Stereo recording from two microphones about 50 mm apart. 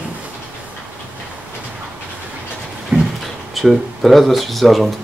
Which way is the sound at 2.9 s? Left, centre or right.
Right.